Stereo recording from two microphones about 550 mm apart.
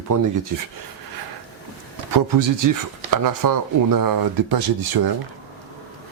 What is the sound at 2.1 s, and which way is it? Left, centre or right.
Speech, right.